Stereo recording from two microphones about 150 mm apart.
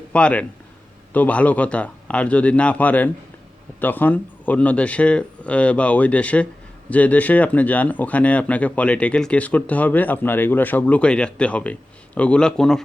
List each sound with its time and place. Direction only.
0.1 s speech: 10° left (ahead or behind)